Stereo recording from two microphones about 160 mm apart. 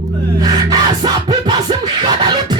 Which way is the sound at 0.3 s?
25° right (ahead or behind).